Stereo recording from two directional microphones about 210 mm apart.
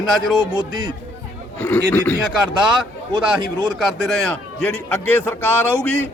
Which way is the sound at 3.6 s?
Centre (ahead or behind).